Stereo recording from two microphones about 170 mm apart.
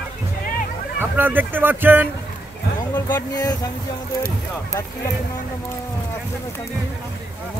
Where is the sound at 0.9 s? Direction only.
10° right (ahead or behind).